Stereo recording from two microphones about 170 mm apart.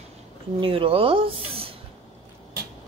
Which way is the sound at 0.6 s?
30° right (ahead or behind).